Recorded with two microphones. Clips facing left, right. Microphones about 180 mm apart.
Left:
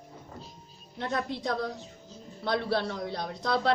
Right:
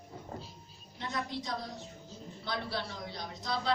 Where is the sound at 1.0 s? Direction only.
60° left (ahead or behind).